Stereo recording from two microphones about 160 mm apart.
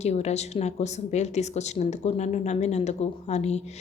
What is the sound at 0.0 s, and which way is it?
A woman's voice, 45° left (ahead or behind).